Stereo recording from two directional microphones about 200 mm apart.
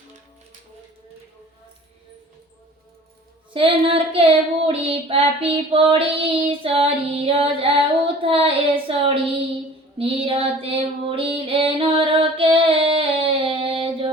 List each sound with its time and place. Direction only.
3.5 s child singing: 25° right (ahead or behind)
10.0 s music: 25° right (ahead or behind)